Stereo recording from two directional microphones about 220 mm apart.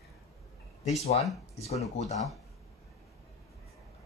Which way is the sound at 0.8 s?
30° left (ahead or behind).